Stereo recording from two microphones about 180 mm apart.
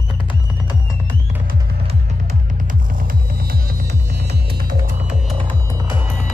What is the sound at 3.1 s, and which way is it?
Throbbing, 55° right (ahead or behind).